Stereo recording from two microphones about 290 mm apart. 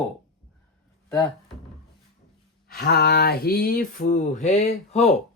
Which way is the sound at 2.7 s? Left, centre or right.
Left.